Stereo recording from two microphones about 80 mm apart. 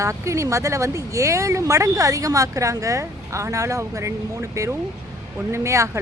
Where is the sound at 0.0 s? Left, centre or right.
Right.